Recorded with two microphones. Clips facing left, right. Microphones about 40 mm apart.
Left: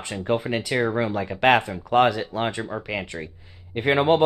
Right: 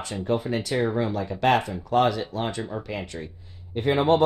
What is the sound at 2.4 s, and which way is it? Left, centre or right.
Speech, left.